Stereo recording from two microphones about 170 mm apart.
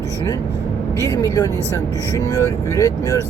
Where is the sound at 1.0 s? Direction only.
20° left (ahead or behind).